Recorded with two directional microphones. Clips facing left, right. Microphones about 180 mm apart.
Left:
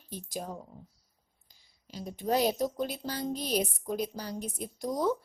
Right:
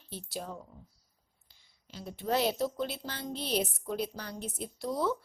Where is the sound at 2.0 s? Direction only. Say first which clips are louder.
Left 2 dB; 15° left (ahead or behind).